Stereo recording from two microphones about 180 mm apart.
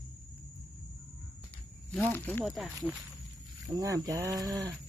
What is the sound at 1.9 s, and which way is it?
Speech, 10° left (ahead or behind).